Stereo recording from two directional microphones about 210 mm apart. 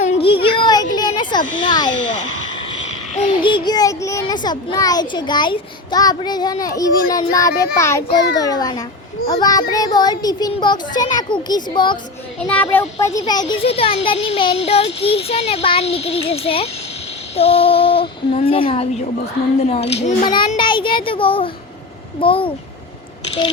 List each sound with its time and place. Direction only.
0.0 s a sound: 30° left (ahead or behind)
3.2 s a child's voice: 25° left (ahead or behind)
12.4 s a child's voice: 5° left (ahead or behind)
13.1 s a child's voice: 20° left (ahead or behind)